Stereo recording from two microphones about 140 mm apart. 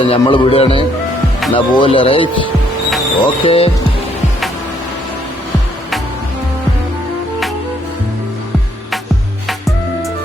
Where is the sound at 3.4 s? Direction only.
45° left (ahead or behind).